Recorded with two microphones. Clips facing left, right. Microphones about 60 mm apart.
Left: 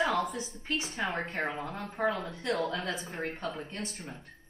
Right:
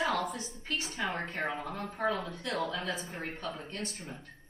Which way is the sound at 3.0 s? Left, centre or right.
Centre.